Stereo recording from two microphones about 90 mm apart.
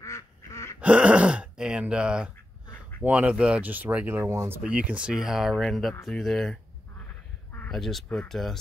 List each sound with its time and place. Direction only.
0.0 s duck: 35° left (ahead or behind)
0.7 s speech: 15° right (ahead or behind)
4.3 s speech: 30° right (ahead or behind)
4.6 s speech: 15° right (ahead or behind); by 6.6 s 5° left (ahead or behind)
7.7 s speech: 5° left (ahead or behind)